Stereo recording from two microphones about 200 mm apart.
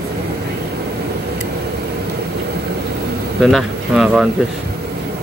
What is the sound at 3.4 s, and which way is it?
Speech, centre (ahead or behind).